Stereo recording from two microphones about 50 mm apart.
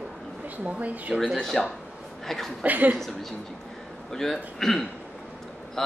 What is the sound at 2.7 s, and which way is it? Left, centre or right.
Speech, right.